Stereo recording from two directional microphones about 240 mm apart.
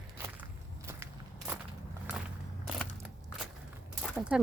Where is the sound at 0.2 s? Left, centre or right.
Centre.